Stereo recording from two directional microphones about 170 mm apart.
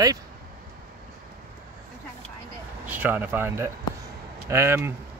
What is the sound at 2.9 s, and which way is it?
Speech, 10° right (ahead or behind).